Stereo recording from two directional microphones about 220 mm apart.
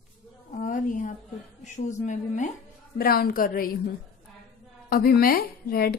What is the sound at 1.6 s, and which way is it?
A woman's voice, 35° left (ahead or behind).